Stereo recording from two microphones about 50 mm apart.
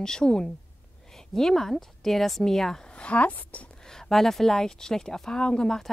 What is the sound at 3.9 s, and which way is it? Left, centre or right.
Speech, centre.